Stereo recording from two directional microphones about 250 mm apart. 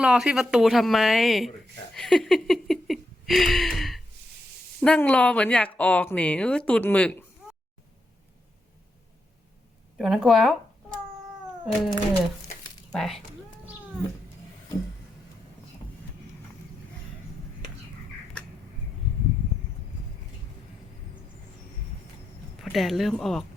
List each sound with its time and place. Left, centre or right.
0.0 s speech: centre
10.0 s speech: centre
11.6 s speech: centre
22.6 s speech: centre